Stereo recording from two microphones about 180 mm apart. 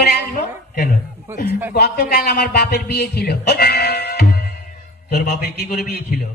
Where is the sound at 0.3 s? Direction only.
50° left (ahead or behind).